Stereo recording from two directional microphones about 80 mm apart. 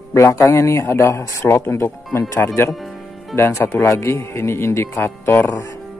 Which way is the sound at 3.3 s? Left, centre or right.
Left.